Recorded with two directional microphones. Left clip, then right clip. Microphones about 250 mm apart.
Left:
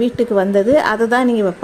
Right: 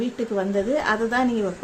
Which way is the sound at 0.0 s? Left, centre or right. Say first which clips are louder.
Left 10 dB; left.